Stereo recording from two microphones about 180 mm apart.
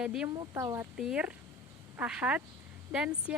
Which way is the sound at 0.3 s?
15° right (ahead or behind).